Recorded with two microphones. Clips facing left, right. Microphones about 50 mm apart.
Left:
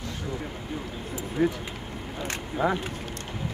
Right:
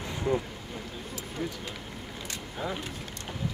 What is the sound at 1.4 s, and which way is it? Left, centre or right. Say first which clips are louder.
Speech: left 11 dB; left.